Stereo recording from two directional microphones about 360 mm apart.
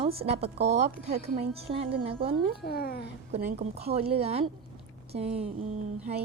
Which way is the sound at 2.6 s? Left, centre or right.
Left.